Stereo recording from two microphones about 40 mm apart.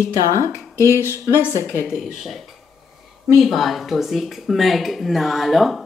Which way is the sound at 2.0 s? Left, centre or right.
Centre.